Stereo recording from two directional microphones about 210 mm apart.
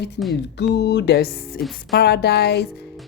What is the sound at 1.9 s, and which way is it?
Speech, 50° left (ahead or behind).